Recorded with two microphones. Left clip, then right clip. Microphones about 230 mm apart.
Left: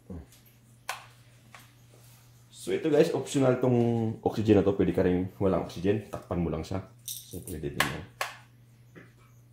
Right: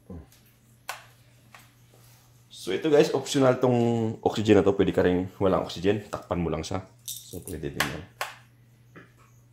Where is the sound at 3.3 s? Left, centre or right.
Right.